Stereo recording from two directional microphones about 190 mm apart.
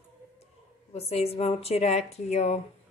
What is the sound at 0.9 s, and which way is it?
A woman's voice, 35° left (ahead or behind).